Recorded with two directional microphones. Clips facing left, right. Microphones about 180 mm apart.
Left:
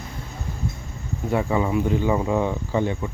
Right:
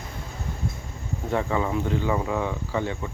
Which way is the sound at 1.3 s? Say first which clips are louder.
Left 3 dB; 10° left (ahead or behind).